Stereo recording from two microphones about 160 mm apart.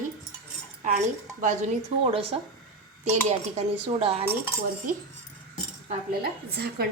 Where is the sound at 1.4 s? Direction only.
55° right (ahead or behind).